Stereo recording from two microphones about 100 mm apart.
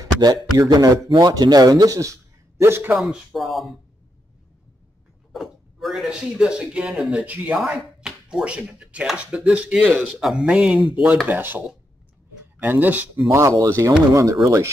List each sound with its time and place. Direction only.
0.0 s speech: 40° right (ahead or behind)
2.9 s speech: 5° right (ahead or behind)
5.3 s speech: centre (ahead or behind); by 11.6 s 20° right (ahead or behind)
12.6 s speech: 15° right (ahead or behind)
13.3 s speech: 30° right (ahead or behind)